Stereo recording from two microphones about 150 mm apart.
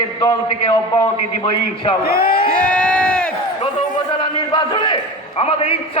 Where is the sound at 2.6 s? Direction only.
10° left (ahead or behind).